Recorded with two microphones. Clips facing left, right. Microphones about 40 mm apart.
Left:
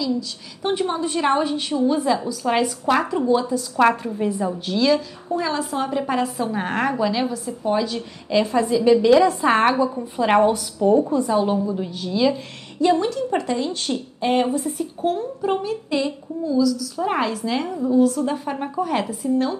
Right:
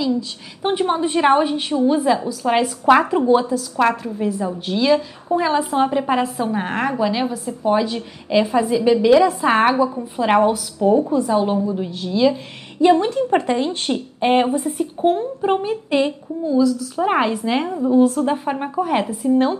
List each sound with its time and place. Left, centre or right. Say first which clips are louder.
0.6 s a woman's voice: right 3 dB; right
2.8 s a woman's voice: right 6 dB; right
3.5 s a woman's voice: even; centre
4.6 s a woman's voice: right 3 dB; centre
6.2 s a woman's voice: right 2 dB; centre
12.8 s a woman's voice: right 4 dB; right